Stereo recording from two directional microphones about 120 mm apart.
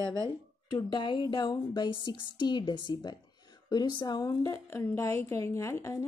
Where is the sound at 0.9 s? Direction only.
40° left (ahead or behind).